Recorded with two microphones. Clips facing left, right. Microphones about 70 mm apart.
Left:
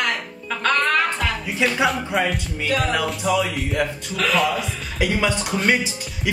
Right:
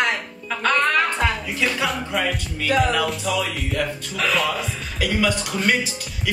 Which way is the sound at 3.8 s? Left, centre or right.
Centre.